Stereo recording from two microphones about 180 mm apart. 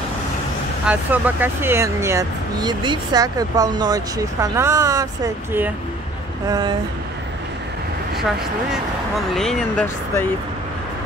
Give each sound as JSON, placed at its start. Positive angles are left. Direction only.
{"t": 0.8, "sound": "speech", "side_deg": -10}
{"t": 8.7, "sound": "speech", "side_deg": 0}